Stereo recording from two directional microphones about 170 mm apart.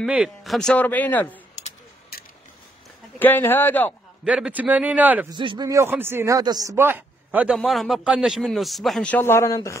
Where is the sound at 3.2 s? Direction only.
10° left (ahead or behind).